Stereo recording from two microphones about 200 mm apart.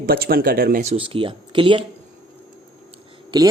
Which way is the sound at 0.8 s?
30° right (ahead or behind).